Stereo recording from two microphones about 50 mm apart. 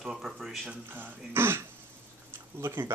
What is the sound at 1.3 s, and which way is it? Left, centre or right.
Speech, right.